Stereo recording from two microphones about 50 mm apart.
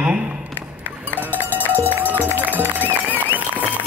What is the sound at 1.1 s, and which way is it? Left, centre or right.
Cowbell, left.